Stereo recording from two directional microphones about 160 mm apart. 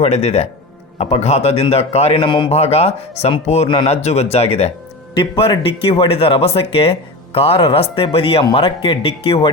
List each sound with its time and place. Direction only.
0.0 s a man's voice: 40° left (ahead or behind)